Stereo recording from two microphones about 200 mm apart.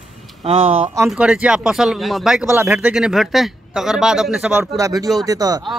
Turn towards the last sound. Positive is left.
turn(degrees=-20)  # may be behind; listen again after turning